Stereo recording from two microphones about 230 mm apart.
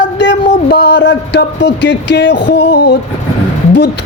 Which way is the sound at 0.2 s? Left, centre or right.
Left.